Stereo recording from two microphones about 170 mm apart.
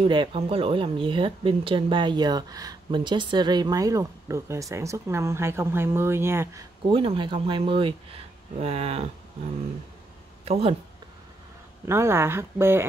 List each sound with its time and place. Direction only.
0.0 s speech: 30° right (ahead or behind); by 6.6 s 15° right (ahead or behind)
6.9 s speech: 30° right (ahead or behind)
10.4 s speech: 35° right (ahead or behind)
11.8 s speech: 15° right (ahead or behind)